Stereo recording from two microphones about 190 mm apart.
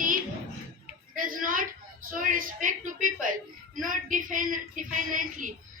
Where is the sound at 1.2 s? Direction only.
45° right (ahead or behind).